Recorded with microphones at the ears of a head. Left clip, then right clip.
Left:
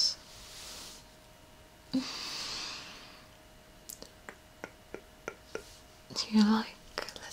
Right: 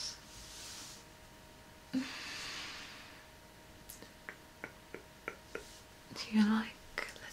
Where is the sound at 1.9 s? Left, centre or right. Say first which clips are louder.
Left 4 dB; left.